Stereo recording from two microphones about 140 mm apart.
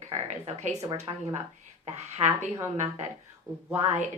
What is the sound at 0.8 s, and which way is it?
Speech, 40° right (ahead or behind).